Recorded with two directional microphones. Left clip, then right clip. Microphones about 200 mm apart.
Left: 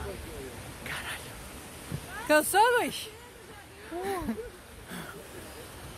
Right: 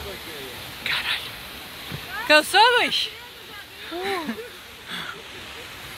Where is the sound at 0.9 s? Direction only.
20° left (ahead or behind).